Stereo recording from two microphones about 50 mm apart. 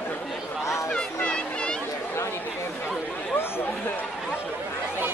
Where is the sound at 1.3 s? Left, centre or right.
Centre.